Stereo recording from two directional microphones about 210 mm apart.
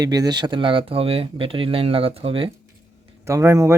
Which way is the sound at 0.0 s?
20° right (ahead or behind).